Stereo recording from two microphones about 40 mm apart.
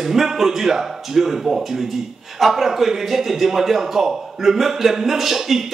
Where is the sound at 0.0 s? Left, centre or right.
Centre.